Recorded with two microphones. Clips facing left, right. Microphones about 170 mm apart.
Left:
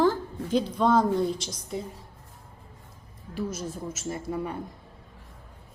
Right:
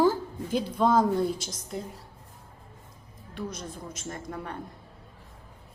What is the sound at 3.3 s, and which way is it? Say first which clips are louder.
Speech: left 4 dB; 5° left (ahead or behind).